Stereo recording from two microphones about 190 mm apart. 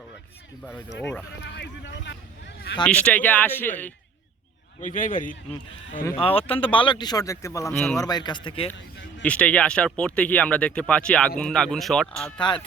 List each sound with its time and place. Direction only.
1.5 s speech: 65° left (ahead or behind)
2.8 s speech: 5° left (ahead or behind)
4.8 s a man's voice: 45° left (ahead or behind)
6.1 s speech: 30° left (ahead or behind)
9.2 s speech: 5° left (ahead or behind)